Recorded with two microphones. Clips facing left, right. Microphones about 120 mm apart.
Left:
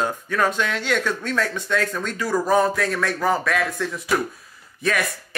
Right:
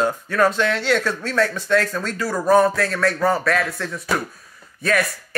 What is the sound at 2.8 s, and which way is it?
Speech, centre (ahead or behind).